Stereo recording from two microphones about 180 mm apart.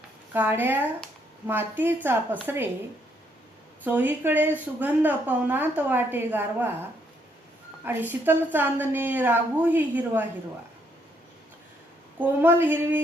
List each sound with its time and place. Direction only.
0.3 s a woman's voice: 10° right (ahead or behind)
3.8 s a woman's voice: 10° right (ahead or behind)
7.9 s a woman's voice: 10° right (ahead or behind)
12.2 s a woman's voice: 10° right (ahead or behind)